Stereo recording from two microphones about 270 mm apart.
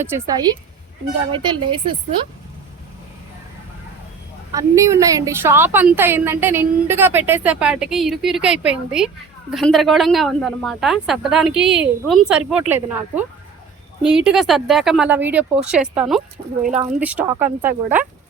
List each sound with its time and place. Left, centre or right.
0.0 s a woman's voice: centre
4.5 s a woman's voice: centre